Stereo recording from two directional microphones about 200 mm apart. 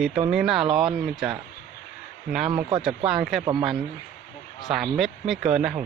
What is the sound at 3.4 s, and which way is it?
Speech, 25° right (ahead or behind).